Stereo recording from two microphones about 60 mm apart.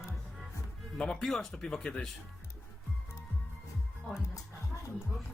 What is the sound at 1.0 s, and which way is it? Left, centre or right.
Speech, centre.